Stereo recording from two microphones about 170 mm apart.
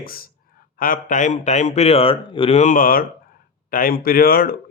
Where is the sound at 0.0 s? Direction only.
60° left (ahead or behind).